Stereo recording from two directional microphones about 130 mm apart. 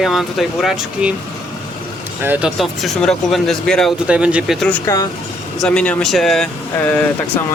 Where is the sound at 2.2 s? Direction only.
15° right (ahead or behind).